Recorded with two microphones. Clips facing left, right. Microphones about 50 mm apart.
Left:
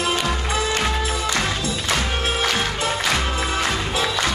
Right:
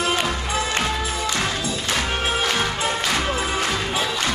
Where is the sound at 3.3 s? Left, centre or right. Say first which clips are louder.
Even; centre.